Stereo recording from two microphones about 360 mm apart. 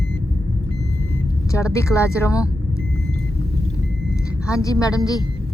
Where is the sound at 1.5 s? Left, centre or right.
Centre.